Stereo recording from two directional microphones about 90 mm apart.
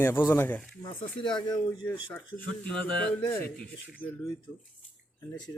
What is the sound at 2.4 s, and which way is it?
Speech, 15° left (ahead or behind).